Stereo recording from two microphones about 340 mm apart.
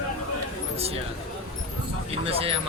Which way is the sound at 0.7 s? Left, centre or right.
Centre.